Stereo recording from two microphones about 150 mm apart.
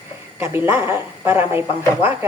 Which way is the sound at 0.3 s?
15° right (ahead or behind).